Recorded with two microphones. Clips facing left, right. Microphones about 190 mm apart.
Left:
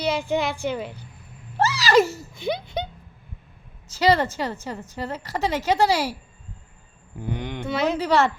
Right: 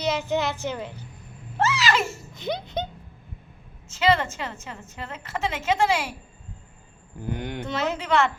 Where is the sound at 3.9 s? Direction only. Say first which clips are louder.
Left 2 dB; 35° left (ahead or behind).